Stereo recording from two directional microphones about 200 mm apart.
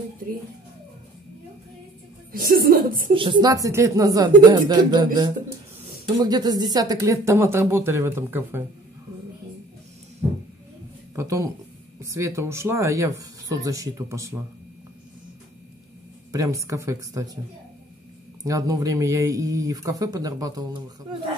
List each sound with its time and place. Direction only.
2.3 s a woman's voice: 45° right (ahead or behind)
3.2 s speech: 25° right (ahead or behind)
11.1 s speech: 15° right (ahead or behind)
16.3 s speech: 15° right (ahead or behind)
18.4 s speech: 15° right (ahead or behind)